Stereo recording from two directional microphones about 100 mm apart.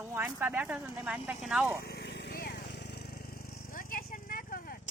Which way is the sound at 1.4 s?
5° right (ahead or behind).